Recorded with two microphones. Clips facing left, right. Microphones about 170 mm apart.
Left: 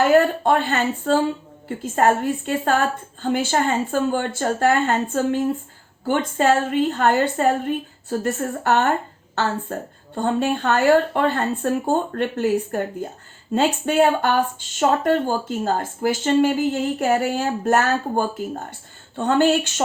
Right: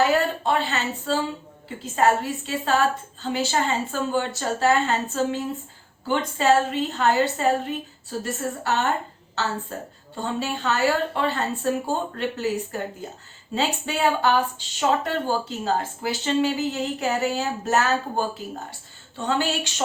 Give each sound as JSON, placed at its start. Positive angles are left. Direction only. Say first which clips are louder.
{"t": 0.1, "sound": "a woman's voice", "louder": "left 6 dB", "side_deg": 55}